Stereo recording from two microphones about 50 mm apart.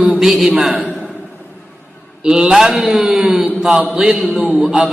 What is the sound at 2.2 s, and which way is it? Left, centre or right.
A man's voice, centre.